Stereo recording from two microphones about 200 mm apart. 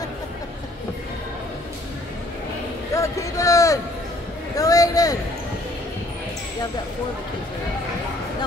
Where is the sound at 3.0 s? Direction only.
15° left (ahead or behind).